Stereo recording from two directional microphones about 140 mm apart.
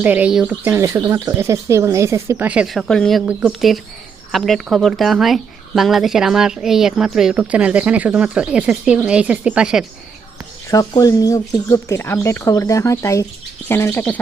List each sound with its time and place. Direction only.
0.0 s speech: 10° right (ahead or behind)
2.5 s speech: 5° right (ahead or behind)
10.7 s speech: 25° left (ahead or behind)